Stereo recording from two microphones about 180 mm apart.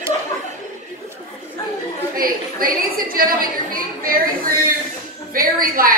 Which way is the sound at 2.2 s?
50° right (ahead or behind).